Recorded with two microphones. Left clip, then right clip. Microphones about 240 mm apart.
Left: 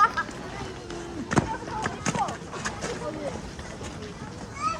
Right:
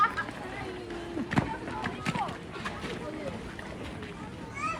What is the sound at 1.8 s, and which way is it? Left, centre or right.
Clip-clop, left.